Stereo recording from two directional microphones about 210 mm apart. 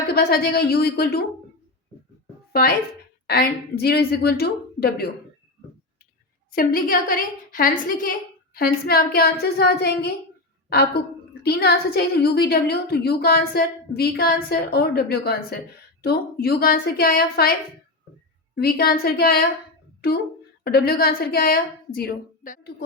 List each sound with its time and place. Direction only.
0.1 s a woman's voice: 45° left (ahead or behind)
2.5 s a woman's voice: 45° left (ahead or behind)
6.5 s a woman's voice: 45° left (ahead or behind)
20.7 s a woman's voice: 45° left (ahead or behind)